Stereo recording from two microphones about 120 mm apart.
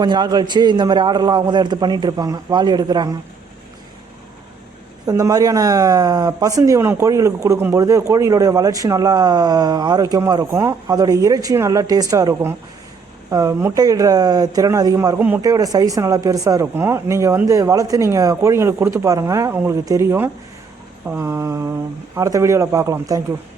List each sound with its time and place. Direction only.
0.0 s a man's voice: 35° right (ahead or behind)
5.0 s a man's voice: 25° right (ahead or behind)